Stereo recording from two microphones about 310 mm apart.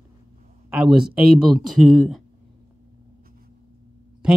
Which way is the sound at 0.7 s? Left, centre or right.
Centre.